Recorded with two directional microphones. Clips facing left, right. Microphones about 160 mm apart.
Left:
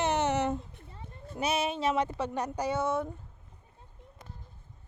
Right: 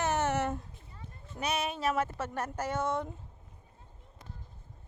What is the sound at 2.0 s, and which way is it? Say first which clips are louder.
Speech: left 3 dB; 15° left (ahead or behind).